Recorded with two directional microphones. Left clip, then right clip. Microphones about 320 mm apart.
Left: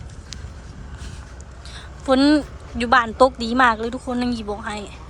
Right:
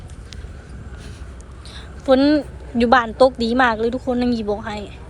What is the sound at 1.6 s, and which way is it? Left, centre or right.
A woman's voice, centre.